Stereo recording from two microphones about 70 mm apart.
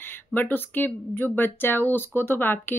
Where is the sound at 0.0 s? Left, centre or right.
Left.